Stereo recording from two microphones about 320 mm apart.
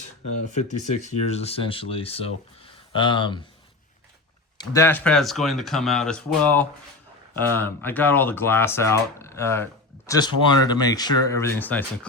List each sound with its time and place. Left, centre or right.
0.0 s speech: left
4.5 s speech: centre